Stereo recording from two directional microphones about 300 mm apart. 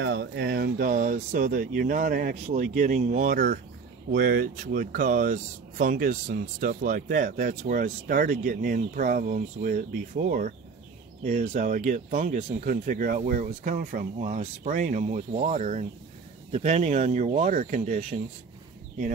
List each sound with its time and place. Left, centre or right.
0.0 s speech: right